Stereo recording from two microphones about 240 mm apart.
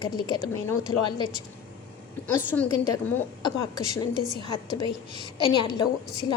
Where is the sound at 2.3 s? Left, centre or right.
Centre.